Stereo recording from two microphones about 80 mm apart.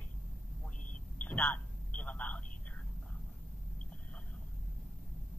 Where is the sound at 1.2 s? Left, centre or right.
Centre.